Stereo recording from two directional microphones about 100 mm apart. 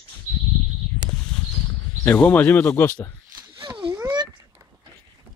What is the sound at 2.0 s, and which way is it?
Speech, 15° left (ahead or behind).